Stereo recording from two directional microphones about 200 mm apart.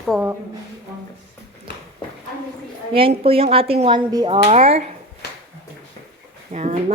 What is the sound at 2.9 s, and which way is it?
A woman's voice, 25° right (ahead or behind).